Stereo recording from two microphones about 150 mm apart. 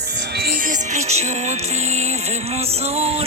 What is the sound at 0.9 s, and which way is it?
Music, 45° right (ahead or behind).